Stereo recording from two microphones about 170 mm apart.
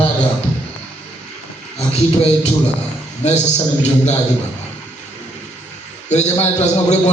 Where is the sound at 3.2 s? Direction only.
40° left (ahead or behind).